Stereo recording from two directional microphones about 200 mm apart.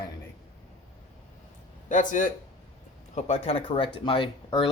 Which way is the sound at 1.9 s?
40° left (ahead or behind).